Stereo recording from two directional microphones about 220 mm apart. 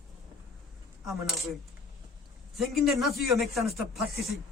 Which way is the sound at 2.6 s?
Centre (ahead or behind).